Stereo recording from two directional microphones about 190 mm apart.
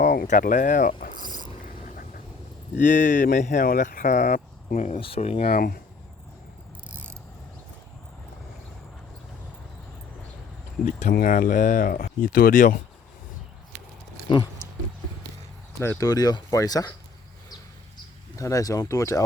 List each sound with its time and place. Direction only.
0.0 s speech: 45° left (ahead or behind)
2.7 s speech: 40° left (ahead or behind)
5.5 s speech: 50° left (ahead or behind)
10.8 s speech: 45° left (ahead or behind)
15.8 s speech: 15° left (ahead or behind)
18.3 s speech: 15° left (ahead or behind)